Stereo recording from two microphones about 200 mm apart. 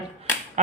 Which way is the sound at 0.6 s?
35° right (ahead or behind).